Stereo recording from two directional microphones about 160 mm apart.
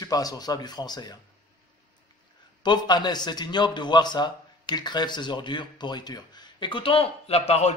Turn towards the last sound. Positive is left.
turn(degrees=40)  # may be behind; listen again after turning